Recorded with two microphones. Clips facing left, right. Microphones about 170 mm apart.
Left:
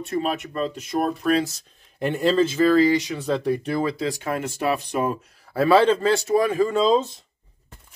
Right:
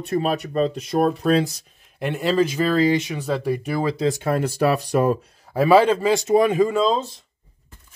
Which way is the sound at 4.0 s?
30° right (ahead or behind).